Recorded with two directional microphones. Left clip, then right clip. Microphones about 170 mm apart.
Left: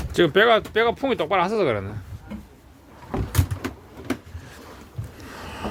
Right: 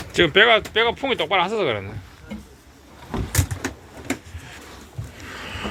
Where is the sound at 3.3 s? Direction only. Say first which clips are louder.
Right 3 dB; 50° left (ahead or behind).